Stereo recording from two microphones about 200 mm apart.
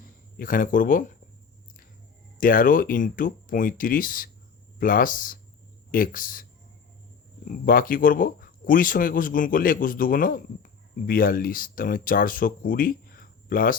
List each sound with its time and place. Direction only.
0.3 s speech: 45° left (ahead or behind)
2.4 s speech: 45° left (ahead or behind)
7.4 s speech: 45° left (ahead or behind)